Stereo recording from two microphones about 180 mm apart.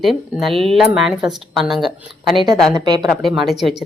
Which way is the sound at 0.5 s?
30° right (ahead or behind).